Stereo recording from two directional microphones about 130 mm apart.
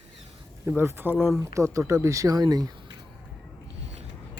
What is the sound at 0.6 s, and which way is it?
Speech, 15° right (ahead or behind).